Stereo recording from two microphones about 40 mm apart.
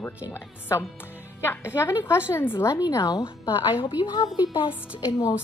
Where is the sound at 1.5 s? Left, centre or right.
Left.